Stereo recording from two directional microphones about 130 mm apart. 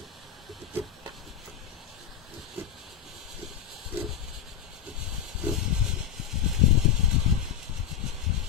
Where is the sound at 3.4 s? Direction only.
5° right (ahead or behind).